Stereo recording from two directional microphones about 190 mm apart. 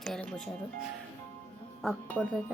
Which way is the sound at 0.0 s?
5° left (ahead or behind).